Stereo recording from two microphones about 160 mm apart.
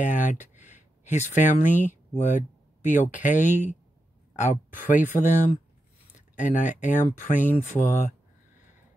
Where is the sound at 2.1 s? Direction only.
50° left (ahead or behind).